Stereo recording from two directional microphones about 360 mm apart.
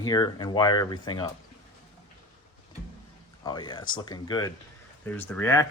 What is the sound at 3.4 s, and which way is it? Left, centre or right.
Speech, centre.